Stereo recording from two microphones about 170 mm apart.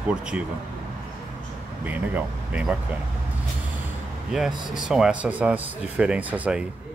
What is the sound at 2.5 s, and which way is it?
Speech, 5° right (ahead or behind).